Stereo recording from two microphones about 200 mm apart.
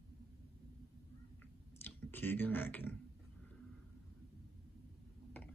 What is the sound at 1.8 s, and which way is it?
Speech, 10° left (ahead or behind).